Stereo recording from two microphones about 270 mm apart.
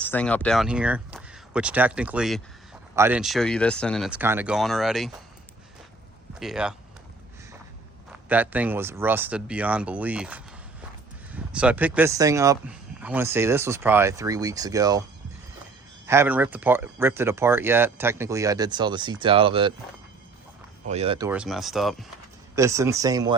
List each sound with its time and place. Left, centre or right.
0.0 s speech: centre
6.4 s speech: centre
8.1 s speech: centre
16.0 s speech: centre
20.8 s speech: right
21.2 s speech: centre
22.5 s speech: centre